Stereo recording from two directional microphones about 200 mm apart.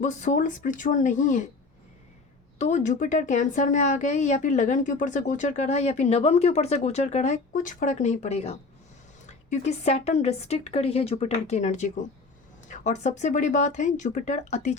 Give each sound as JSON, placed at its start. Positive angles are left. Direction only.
{"t": 0.0, "sound": "speech", "side_deg": 40}
{"t": 2.6, "sound": "speech", "side_deg": 35}